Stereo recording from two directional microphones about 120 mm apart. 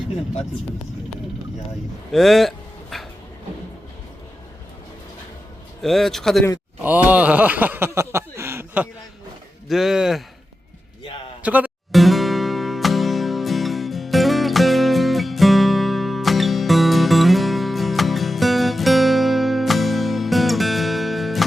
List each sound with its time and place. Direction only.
2.1 s a sound: centre (ahead or behind)
5.8 s speech: centre (ahead or behind)
6.8 s speech: 15° right (ahead or behind)
9.6 s speech: 5° right (ahead or behind)
11.4 s speech: 10° right (ahead or behind)
11.9 s music: centre (ahead or behind)